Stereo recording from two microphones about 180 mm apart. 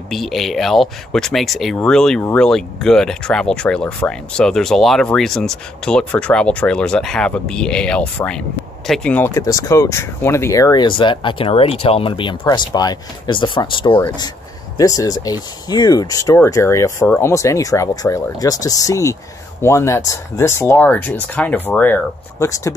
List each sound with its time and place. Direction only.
0.1 s speech: centre (ahead or behind); by 22.7 s 15° left (ahead or behind)